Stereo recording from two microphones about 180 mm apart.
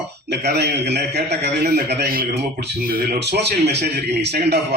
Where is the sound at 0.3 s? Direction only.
70° right (ahead or behind).